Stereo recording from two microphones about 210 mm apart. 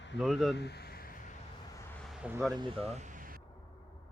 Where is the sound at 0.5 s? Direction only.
50° left (ahead or behind).